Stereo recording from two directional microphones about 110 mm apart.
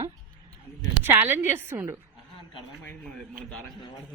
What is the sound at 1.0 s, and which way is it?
Speech, 20° right (ahead or behind).